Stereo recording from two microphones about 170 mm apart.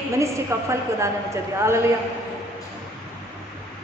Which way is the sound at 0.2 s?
15° right (ahead or behind).